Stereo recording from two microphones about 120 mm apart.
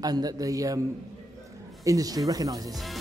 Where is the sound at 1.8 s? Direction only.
30° right (ahead or behind).